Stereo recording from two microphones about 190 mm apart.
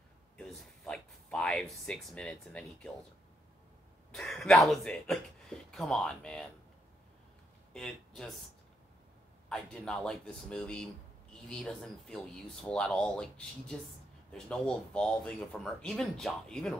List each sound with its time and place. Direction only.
0.4 s speech: 5° left (ahead or behind)
4.1 s speech: centre (ahead or behind)
7.7 s speech: 5° left (ahead or behind)
9.5 s speech: 5° left (ahead or behind)